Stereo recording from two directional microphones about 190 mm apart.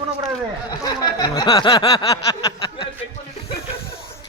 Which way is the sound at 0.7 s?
20° left (ahead or behind).